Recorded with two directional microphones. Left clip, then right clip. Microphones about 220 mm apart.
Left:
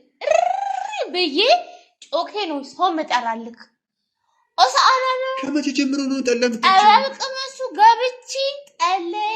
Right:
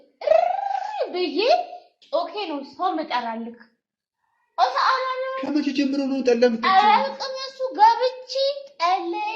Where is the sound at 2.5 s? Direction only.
35° left (ahead or behind).